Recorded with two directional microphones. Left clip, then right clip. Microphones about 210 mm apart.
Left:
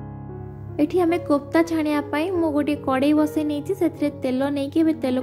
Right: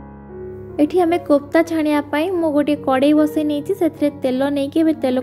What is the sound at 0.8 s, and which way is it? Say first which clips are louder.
A woman's voice: right 4 dB; 15° right (ahead or behind).